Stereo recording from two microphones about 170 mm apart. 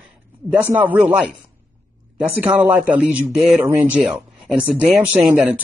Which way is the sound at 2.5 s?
10° right (ahead or behind).